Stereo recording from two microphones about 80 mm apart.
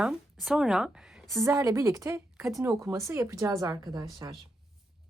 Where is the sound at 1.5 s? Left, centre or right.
Right.